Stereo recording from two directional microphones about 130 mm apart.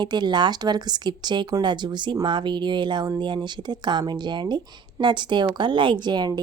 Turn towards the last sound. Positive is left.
turn(degrees=-35)  # may be behind; listen again after turning